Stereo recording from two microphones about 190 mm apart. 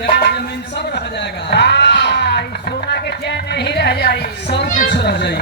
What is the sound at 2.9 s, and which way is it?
Music, 60° left (ahead or behind).